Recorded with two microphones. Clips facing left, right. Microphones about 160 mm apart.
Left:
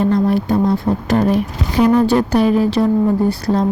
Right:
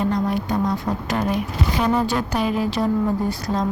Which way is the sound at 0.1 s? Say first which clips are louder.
Left 7 dB; 30° left (ahead or behind).